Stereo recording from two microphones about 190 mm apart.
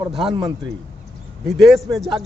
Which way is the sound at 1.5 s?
Centre (ahead or behind).